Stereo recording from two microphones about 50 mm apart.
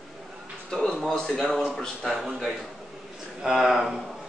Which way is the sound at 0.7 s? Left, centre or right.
Centre.